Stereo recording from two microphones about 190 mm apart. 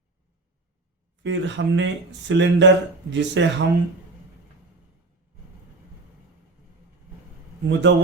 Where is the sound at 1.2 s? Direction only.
70° right (ahead or behind).